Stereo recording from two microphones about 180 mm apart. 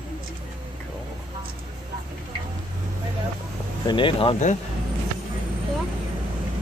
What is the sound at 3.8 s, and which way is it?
Speech, 25° left (ahead or behind).